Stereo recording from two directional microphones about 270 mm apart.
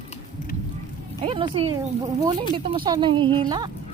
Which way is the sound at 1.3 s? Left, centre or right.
Centre.